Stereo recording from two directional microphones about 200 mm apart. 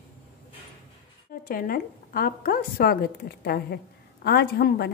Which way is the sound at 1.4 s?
45° left (ahead or behind).